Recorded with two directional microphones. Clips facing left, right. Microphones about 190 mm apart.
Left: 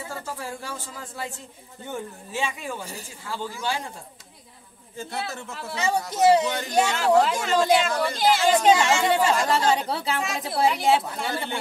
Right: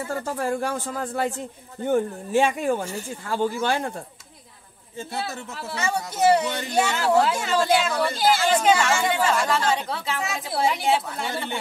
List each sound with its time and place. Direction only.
0.1 s speech: 55° right (ahead or behind)
5.1 s speech: 5° right (ahead or behind)
5.8 s a woman's voice: 20° left (ahead or behind)
7.2 s speech: 5° right (ahead or behind)
8.7 s a woman's voice: 20° left (ahead or behind)
9.1 s speech: 35° left (ahead or behind)
10.5 s speech: centre (ahead or behind)